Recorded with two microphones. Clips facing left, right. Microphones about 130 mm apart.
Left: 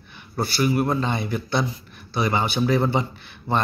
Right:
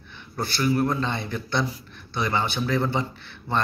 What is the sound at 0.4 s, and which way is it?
Speech, 10° left (ahead or behind).